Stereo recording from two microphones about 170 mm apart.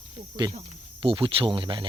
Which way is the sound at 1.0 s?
30° right (ahead or behind).